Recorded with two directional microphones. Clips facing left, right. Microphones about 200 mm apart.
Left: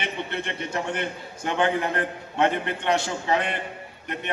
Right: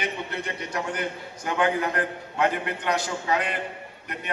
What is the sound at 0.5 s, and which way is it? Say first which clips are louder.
A man's voice: left 2 dB; 25° left (ahead or behind).